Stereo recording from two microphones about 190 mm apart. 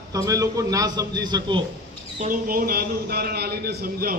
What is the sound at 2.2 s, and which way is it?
A man's voice, 45° right (ahead or behind).